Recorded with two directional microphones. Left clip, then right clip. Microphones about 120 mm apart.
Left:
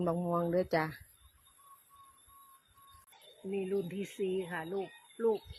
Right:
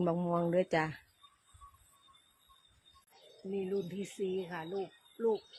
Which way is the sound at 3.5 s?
30° left (ahead or behind).